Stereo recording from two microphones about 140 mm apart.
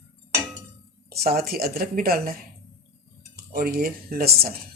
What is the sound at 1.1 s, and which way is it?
Speech, 90° right.